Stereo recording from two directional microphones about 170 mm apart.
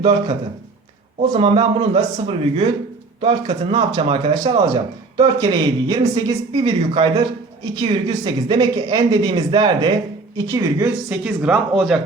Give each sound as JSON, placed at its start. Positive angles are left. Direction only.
{"t": 1.3, "sound": "a man's voice", "side_deg": -30}
{"t": 10.9, "sound": "speech", "side_deg": -5}